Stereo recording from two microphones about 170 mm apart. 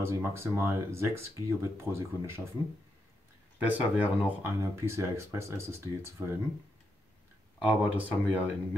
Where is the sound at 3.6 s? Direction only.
10° right (ahead or behind).